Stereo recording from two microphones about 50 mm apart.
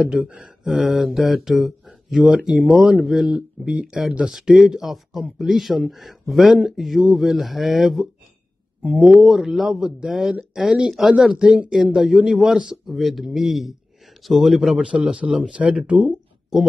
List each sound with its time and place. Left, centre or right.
0.0 s speech: centre
2.3 s speech: centre
3.1 s speech: centre
3.3 s speech: right
4.3 s speech: centre
11.7 s speech: centre
14.8 s speech: right
16.5 s speech: centre